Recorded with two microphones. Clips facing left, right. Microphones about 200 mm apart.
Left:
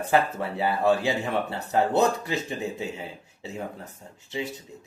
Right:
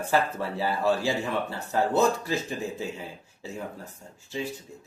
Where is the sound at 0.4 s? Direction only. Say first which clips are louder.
Left 2 dB; 55° left (ahead or behind).